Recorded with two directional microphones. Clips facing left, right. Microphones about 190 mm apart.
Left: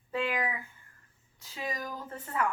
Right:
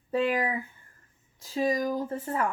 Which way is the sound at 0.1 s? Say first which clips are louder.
Right 6 dB; 40° right (ahead or behind).